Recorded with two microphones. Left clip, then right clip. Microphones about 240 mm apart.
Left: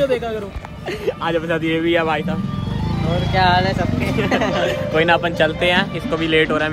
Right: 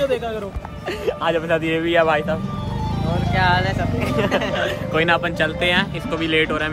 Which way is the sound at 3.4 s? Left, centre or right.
Centre.